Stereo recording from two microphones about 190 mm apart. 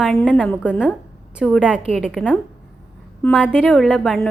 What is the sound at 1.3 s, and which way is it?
A woman's voice, 5° right (ahead or behind).